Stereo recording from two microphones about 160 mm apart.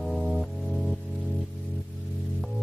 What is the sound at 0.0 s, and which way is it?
Music, centre (ahead or behind).